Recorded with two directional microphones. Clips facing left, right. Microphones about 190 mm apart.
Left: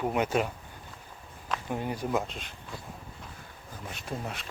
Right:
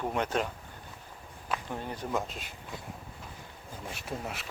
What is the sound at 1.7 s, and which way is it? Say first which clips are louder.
Speech: left 5 dB; 10° left (ahead or behind).